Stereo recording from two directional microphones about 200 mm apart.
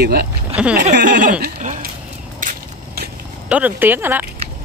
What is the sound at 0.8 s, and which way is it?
Speech, 40° right (ahead or behind).